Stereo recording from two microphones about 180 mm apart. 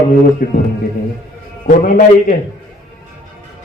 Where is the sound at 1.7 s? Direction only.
50° left (ahead or behind).